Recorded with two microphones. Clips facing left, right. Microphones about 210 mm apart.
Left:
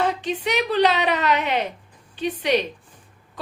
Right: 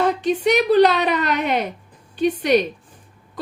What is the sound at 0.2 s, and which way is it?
A woman's voice, 45° right (ahead or behind).